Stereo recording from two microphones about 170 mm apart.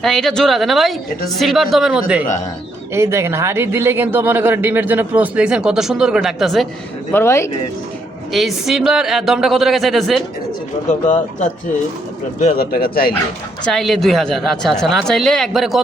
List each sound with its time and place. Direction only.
0.0 s speech: 5° left (ahead or behind)
2.9 s speech: 15° right (ahead or behind); by 6.7 s centre (ahead or behind)
7.1 s speech: 15° left (ahead or behind)
8.3 s speech: centre (ahead or behind)
10.8 s speech: 50° left (ahead or behind)
12.5 s speech: 60° left (ahead or behind)
13.7 s speech: centre (ahead or behind)